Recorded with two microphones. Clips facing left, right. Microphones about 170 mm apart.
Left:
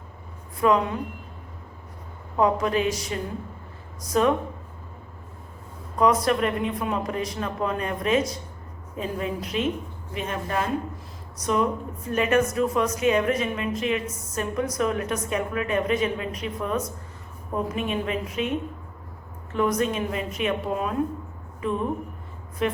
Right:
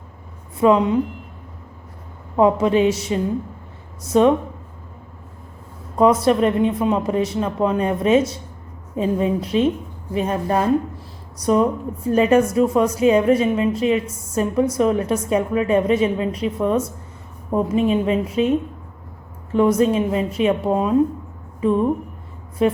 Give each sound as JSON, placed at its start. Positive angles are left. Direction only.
{"t": 0.6, "sound": "a woman's voice", "side_deg": -20}
{"t": 2.3, "sound": "a woman's voice", "side_deg": -25}
{"t": 6.0, "sound": "a woman's voice", "side_deg": -30}
{"t": 19.5, "sound": "a woman's voice", "side_deg": -30}